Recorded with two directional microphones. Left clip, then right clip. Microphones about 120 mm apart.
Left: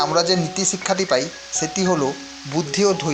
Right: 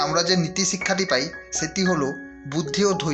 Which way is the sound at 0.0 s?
30° left (ahead or behind).